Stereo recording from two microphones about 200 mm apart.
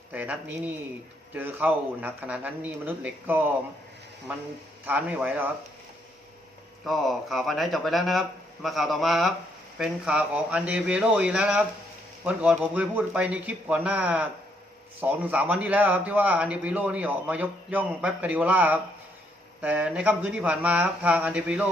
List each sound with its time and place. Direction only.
0.1 s a man's voice: 10° right (ahead or behind)
4.9 s a man's voice: 10° right (ahead or behind)
6.8 s a man's voice: centre (ahead or behind)